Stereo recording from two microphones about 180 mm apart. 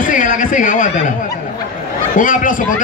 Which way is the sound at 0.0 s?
45° left (ahead or behind).